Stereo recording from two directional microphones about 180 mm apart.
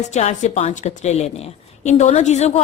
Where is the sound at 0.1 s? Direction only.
40° left (ahead or behind).